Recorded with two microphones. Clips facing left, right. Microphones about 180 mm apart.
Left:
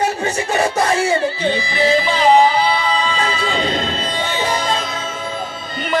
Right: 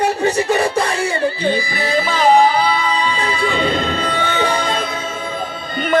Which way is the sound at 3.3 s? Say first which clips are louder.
Right 2 dB; 55° right (ahead or behind).